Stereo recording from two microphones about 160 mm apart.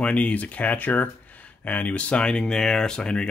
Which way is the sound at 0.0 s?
10° left (ahead or behind).